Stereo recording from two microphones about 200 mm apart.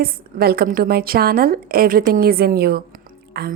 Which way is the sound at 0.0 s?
50° right (ahead or behind).